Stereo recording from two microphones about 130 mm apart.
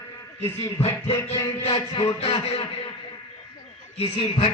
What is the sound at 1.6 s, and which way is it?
Speech, 40° left (ahead or behind).